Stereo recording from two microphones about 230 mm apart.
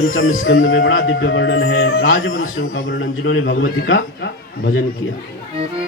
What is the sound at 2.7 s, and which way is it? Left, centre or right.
Speech, left.